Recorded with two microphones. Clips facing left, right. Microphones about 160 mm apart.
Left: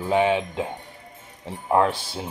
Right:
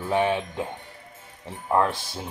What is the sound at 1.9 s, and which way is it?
Speech, centre (ahead or behind).